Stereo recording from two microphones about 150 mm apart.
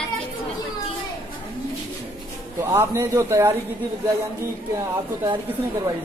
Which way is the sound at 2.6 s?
15° right (ahead or behind).